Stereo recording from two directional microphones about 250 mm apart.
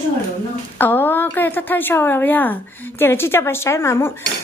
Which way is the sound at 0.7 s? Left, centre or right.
Centre.